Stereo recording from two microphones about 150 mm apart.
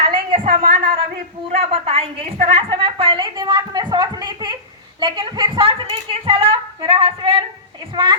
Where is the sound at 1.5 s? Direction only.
40° right (ahead or behind).